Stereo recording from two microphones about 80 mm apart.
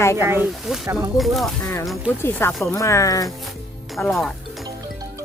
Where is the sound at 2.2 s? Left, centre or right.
Left.